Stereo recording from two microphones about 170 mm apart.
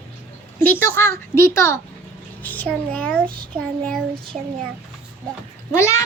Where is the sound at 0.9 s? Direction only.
15° left (ahead or behind).